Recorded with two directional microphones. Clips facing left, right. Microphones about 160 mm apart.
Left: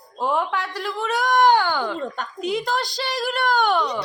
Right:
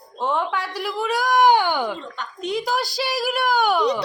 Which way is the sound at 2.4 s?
5° left (ahead or behind).